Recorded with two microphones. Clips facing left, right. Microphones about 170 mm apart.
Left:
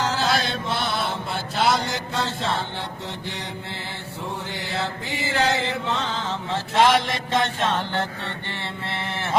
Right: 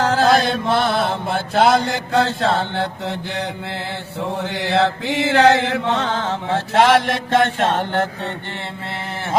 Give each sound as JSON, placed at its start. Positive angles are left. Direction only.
{"t": 0.0, "sound": "chant", "side_deg": -55}
{"t": 4.2, "sound": "chant", "side_deg": -70}